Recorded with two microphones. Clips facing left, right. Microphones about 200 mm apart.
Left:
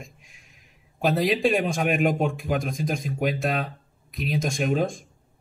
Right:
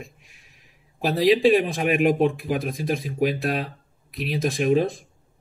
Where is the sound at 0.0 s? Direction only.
Centre (ahead or behind).